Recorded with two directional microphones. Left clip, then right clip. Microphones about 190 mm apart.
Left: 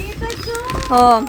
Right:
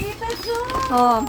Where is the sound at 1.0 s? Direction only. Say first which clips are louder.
Left 6 dB; 20° left (ahead or behind).